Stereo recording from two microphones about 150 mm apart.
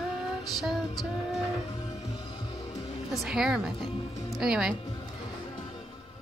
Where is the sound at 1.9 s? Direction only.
40° left (ahead or behind).